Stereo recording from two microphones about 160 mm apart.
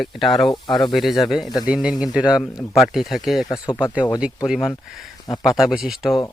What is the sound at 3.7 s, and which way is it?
Speech, 30° left (ahead or behind).